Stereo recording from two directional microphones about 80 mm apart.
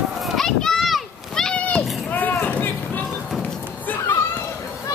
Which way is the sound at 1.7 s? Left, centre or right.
Left.